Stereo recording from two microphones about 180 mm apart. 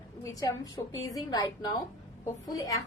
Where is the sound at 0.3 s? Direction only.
20° left (ahead or behind).